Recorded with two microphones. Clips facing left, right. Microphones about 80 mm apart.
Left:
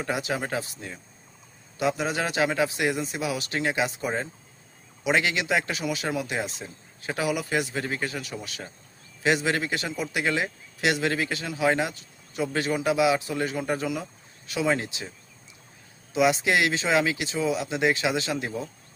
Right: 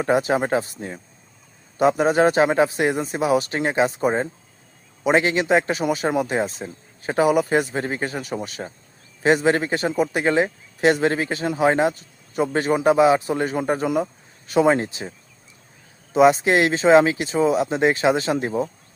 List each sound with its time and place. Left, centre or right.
0.0 s speech: right
16.1 s speech: right